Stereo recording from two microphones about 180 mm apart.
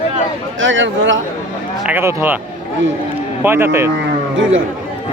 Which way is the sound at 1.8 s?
15° right (ahead or behind).